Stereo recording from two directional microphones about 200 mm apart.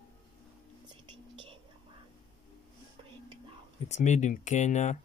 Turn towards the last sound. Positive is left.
turn(degrees=35)  # may be behind; listen again after turning